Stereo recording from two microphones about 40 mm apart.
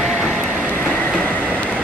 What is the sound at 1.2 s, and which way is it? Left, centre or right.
Train, left.